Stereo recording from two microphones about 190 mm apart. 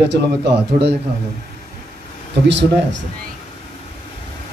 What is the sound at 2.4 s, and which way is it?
Speech, 70° right (ahead or behind).